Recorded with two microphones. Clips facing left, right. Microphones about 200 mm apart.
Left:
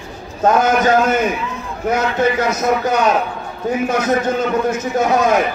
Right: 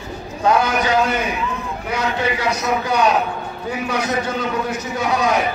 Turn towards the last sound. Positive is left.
turn(degrees=45)  # may be behind; listen again after turning